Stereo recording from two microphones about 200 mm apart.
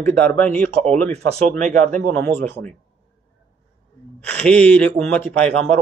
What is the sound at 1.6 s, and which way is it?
Speech, 40° right (ahead or behind).